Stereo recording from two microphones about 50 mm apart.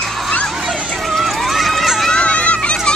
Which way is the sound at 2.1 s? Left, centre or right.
Left.